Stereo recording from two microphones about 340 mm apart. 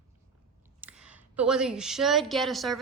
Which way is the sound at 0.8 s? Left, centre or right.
Centre.